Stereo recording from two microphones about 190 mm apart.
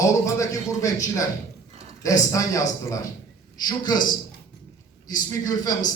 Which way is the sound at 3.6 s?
20° left (ahead or behind).